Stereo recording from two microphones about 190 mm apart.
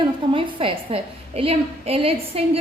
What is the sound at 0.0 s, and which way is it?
A woman's voice, 30° right (ahead or behind).